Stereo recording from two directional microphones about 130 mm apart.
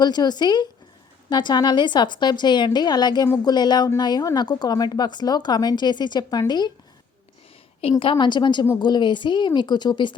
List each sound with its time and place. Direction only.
0.0 s a woman's voice: 30° left (ahead or behind)
7.8 s a woman's voice: 45° left (ahead or behind)